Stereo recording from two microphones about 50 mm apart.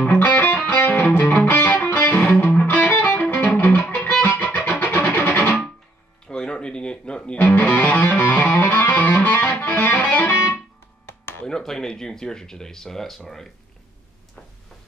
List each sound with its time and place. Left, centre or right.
0.0 s music: left
1.4 s music: left
6.2 s music: centre
7.3 s music: left
11.1 s a sound: left
11.4 s a sound: centre